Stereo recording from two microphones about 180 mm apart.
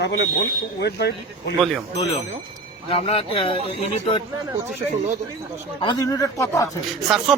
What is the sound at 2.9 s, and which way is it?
Speech, 30° left (ahead or behind).